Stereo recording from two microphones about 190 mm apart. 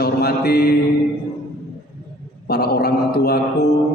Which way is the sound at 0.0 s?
55° left (ahead or behind).